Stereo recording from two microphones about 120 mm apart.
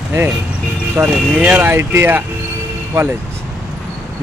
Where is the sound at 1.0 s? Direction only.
20° right (ahead or behind).